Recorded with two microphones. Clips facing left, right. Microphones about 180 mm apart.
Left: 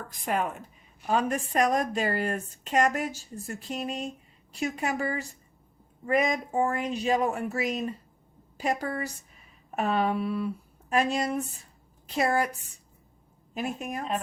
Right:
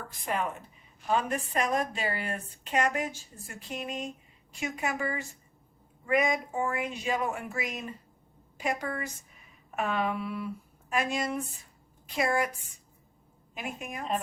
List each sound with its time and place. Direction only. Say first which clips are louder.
1.1 s a woman's voice: left 3 dB; 45° left (ahead or behind)
13.5 s speech: left 6 dB; 40° left (ahead or behind)